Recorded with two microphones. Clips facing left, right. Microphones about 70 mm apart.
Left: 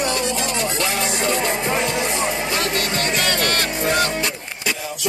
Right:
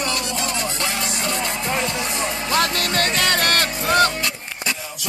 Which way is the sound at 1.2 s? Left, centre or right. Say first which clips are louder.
Left 5 dB; left.